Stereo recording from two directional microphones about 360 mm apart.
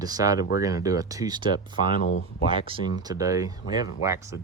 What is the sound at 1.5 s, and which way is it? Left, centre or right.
Speech, centre.